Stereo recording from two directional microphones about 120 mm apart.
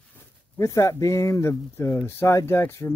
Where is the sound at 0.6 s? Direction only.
25° left (ahead or behind).